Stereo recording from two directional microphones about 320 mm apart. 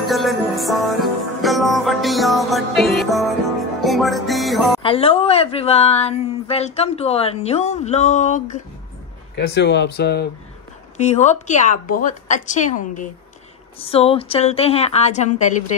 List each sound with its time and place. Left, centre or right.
0.1 s music: centre
4.8 s speech: centre